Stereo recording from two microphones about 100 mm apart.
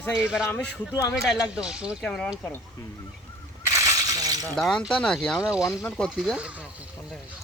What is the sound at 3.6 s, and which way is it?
Shatter, 30° right (ahead or behind).